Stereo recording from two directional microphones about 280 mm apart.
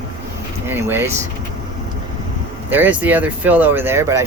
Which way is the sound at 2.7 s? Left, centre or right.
Centre.